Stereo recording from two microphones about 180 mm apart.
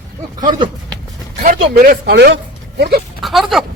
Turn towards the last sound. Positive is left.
turn(degrees=0)  # may be behind; listen again after turning